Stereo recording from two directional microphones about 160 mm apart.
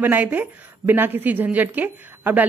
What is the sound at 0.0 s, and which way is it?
A woman's voice, 10° right (ahead or behind).